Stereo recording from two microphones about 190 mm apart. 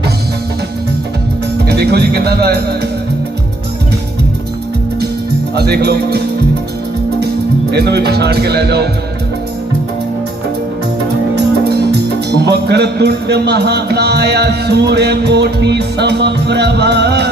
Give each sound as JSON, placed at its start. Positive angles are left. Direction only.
{"t": 1.6, "sound": "speech", "side_deg": -60}
{"t": 5.5, "sound": "speech", "side_deg": -60}
{"t": 7.7, "sound": "speech", "side_deg": -60}
{"t": 11.7, "sound": "speech", "side_deg": -60}